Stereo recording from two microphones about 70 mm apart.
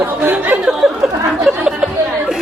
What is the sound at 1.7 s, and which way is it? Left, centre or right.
Chatter, centre.